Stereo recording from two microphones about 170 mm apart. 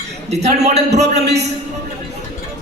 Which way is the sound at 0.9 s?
75° right (ahead or behind).